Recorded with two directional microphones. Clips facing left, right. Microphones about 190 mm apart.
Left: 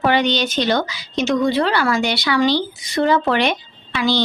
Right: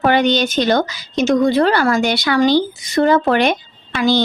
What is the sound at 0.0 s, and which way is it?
A woman's voice, 50° right (ahead or behind).